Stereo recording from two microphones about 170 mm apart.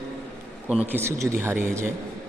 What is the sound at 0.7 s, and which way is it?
A man's voice, 10° right (ahead or behind).